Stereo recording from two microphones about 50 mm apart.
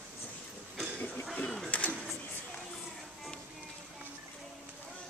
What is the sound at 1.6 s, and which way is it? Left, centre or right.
Battle cry, left.